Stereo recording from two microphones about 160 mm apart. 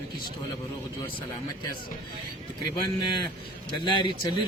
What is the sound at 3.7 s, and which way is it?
Speech, 30° left (ahead or behind).